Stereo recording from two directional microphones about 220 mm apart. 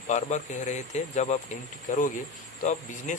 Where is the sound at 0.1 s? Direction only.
35° left (ahead or behind).